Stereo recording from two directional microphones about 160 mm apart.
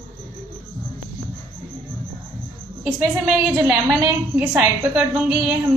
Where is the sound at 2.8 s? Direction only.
5° right (ahead or behind).